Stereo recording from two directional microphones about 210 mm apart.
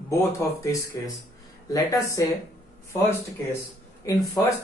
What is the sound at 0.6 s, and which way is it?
Speech, 15° left (ahead or behind).